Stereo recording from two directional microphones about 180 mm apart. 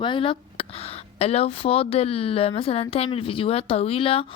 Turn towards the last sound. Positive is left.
turn(degrees=30)  # may be behind; listen again after turning